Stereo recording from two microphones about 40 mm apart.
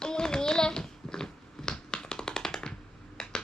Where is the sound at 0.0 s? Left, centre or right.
Centre.